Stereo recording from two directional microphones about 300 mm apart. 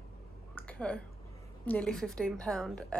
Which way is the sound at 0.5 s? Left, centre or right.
Centre.